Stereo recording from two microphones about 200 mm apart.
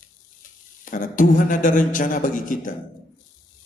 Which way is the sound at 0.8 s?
40° left (ahead or behind).